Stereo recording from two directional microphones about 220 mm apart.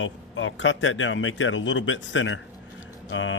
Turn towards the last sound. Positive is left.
turn(degrees=60)  # may be behind; listen again after turning